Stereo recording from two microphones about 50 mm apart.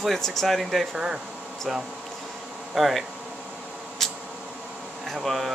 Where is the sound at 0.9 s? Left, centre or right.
Centre.